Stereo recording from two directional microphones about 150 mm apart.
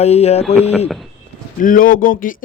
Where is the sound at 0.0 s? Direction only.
45° left (ahead or behind).